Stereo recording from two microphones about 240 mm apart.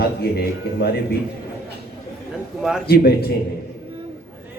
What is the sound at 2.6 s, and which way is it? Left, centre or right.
Speech, centre.